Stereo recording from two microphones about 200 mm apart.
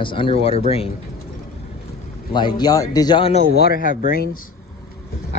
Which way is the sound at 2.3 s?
20° left (ahead or behind).